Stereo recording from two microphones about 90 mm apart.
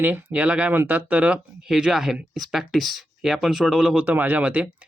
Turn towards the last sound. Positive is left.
turn(degrees=-15)  # may be behind; listen again after turning